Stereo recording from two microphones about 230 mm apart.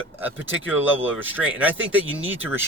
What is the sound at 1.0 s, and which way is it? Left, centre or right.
Speech, centre.